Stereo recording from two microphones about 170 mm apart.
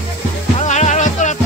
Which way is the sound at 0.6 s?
45° left (ahead or behind).